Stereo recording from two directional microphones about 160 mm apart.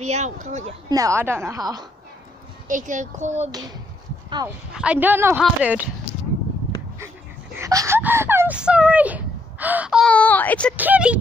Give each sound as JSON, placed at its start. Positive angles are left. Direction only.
{"t": 0.0, "sound": "speech", "side_deg": -45}
{"t": 0.8, "sound": "a woman's voice", "side_deg": -20}
{"t": 2.7, "sound": "speech", "side_deg": -50}
{"t": 4.7, "sound": "speech", "side_deg": -10}
{"t": 7.5, "sound": "speech", "side_deg": -20}
{"t": 10.0, "sound": "speech", "side_deg": 10}
{"t": 10.8, "sound": "speech", "side_deg": -10}